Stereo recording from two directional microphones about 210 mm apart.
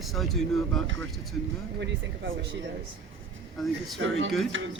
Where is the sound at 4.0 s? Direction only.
65° right (ahead or behind).